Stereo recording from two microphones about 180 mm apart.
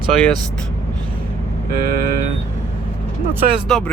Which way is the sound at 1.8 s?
55° right (ahead or behind).